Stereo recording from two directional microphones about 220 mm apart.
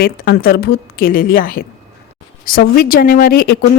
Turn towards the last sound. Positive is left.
turn(degrees=45)  # may be behind; listen again after turning